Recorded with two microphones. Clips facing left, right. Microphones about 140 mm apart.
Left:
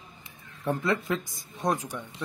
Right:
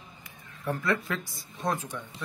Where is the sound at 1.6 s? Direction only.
15° left (ahead or behind).